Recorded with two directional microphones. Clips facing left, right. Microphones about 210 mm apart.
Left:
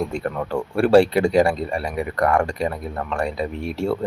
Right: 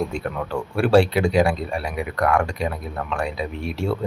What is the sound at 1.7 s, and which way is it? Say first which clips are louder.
Speech: left 2 dB; 5° right (ahead or behind).